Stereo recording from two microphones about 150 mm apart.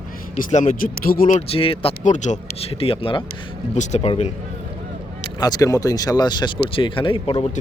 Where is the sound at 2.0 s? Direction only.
55° left (ahead or behind).